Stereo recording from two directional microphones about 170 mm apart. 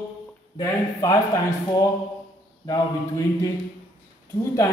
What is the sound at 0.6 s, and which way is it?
Speech, 20° left (ahead or behind).